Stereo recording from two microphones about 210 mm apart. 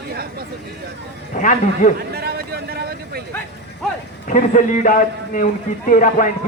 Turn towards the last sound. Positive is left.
turn(degrees=40)  # may be behind; listen again after turning